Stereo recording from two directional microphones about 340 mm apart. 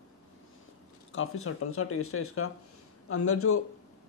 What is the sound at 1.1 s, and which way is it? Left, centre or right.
Speech, left.